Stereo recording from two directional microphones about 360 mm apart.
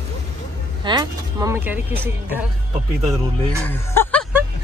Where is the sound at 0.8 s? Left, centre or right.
Centre.